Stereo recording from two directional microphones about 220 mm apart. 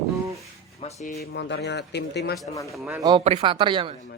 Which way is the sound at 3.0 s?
20° right (ahead or behind).